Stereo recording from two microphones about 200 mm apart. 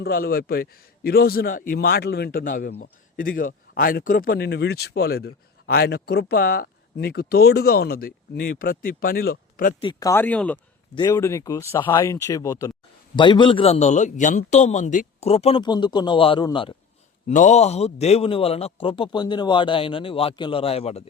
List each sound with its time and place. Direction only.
0.0 s speech: 50° left (ahead or behind)
9.8 s a man's voice: 20° left (ahead or behind)
17.2 s a man's voice: 35° left (ahead or behind)